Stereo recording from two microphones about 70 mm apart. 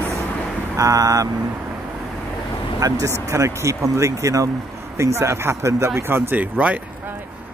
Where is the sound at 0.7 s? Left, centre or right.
Right.